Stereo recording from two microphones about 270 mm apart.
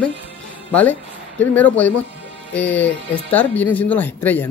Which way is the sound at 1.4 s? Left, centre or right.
Centre.